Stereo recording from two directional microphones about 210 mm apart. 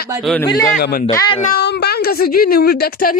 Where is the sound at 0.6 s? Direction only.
45° left (ahead or behind).